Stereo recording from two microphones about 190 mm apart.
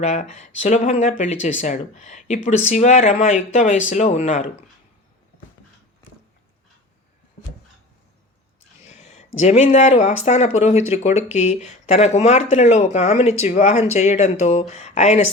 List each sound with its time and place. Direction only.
0.0 s speech: 40° left (ahead or behind)
8.9 s speech: 35° left (ahead or behind)